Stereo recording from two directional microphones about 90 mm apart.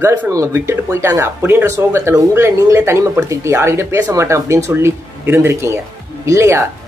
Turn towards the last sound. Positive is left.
turn(degrees=-35)  # may be behind; listen again after turning